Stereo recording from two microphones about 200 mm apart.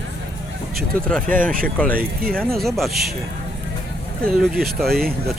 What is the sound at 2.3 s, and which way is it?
Speech, 5° left (ahead or behind).